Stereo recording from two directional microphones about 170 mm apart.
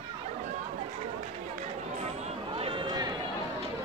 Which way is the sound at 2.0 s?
35° right (ahead or behind).